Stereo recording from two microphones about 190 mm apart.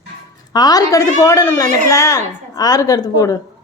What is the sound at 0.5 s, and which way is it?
A woman's voice, 20° left (ahead or behind).